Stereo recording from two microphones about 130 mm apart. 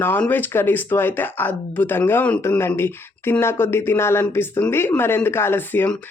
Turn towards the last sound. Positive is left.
turn(degrees=15)  # may be behind; listen again after turning